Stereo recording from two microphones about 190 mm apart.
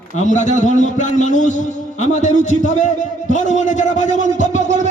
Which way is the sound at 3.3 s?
40° left (ahead or behind).